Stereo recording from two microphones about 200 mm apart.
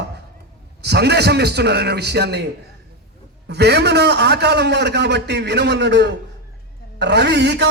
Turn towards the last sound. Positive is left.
turn(degrees=-55)  # may be behind; listen again after turning